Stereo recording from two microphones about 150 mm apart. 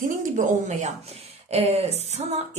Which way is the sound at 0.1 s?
60° right (ahead or behind).